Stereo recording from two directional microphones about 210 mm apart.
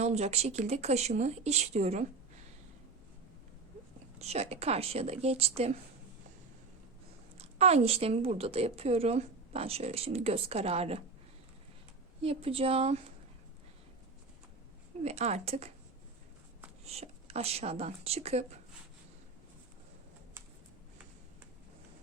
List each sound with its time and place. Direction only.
0.0 s speech: 30° right (ahead or behind)
4.2 s a woman's voice: 30° right (ahead or behind)
7.3 s a woman's voice: 30° right (ahead or behind)
12.2 s a woman's voice: 25° right (ahead or behind)
15.0 s a woman's voice: 30° right (ahead or behind)
16.8 s a woman's voice: 30° right (ahead or behind)